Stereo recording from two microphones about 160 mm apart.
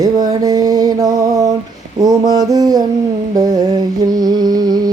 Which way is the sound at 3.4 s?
25° right (ahead or behind).